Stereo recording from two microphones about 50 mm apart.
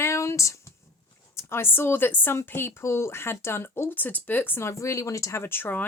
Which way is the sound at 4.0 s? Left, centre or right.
Left.